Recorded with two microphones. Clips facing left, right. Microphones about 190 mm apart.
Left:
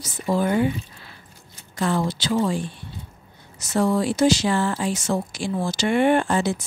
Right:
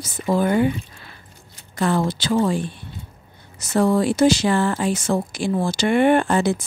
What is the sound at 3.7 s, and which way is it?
Speech, 55° right (ahead or behind).